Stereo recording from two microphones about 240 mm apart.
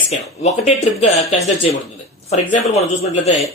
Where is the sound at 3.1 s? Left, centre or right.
Left.